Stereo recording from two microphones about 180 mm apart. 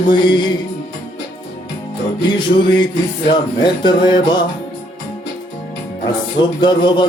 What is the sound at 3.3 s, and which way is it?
Speech, 25° left (ahead or behind).